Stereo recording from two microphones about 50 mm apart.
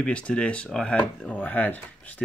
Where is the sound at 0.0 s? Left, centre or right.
Left.